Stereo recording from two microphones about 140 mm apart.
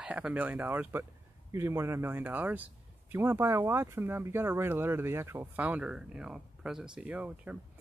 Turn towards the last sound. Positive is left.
turn(degrees=-10)  # may be behind; listen again after turning